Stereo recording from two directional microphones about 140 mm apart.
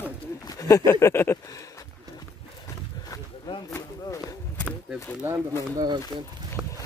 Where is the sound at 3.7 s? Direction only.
25° left (ahead or behind).